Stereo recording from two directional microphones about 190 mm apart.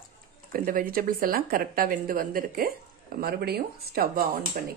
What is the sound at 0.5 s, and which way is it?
Speech, 50° right (ahead or behind).